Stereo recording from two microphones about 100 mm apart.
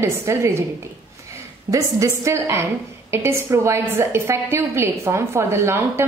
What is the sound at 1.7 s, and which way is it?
A woman's voice, 30° right (ahead or behind).